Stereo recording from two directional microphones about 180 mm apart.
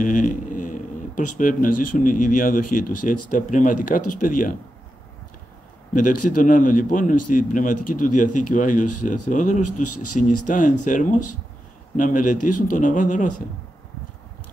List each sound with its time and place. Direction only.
0.0 s speech: 45° left (ahead or behind)
5.9 s speech: 45° left (ahead or behind)